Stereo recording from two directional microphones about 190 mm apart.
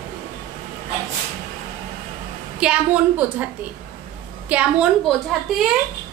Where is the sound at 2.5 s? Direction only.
5° right (ahead or behind).